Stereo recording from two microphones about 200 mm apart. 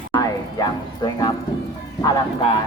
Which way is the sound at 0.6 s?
20° left (ahead or behind).